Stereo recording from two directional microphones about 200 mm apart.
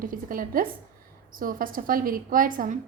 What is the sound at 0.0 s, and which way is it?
A woman's voice, 45° right (ahead or behind).